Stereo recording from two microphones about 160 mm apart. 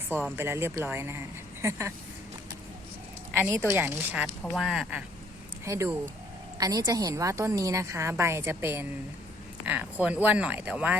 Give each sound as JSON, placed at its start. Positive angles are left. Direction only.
{"t": 0.1, "sound": "a woman's voice", "side_deg": -10}
{"t": 3.5, "sound": "a woman's voice", "side_deg": -15}
{"t": 5.6, "sound": "a woman's voice", "side_deg": -20}